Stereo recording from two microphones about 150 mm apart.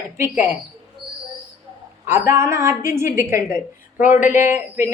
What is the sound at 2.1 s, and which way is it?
A woman's voice, 20° right (ahead or behind).